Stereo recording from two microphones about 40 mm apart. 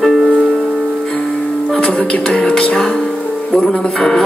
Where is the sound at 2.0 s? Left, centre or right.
Left.